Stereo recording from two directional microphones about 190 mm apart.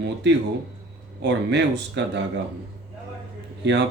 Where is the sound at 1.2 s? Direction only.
65° right (ahead or behind).